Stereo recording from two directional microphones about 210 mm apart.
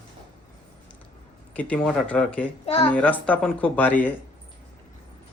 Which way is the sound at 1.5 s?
5° left (ahead or behind).